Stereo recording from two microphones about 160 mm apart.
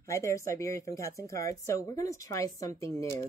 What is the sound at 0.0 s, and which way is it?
A woman's voice, 20° left (ahead or behind).